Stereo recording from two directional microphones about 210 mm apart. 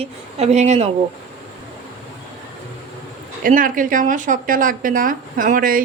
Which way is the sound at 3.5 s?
40° right (ahead or behind).